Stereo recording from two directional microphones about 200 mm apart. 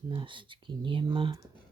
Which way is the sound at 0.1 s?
25° right (ahead or behind).